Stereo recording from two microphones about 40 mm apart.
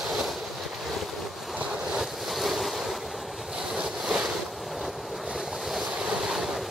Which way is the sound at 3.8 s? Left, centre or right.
Centre.